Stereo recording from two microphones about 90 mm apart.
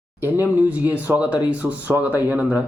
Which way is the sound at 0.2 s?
20° right (ahead or behind).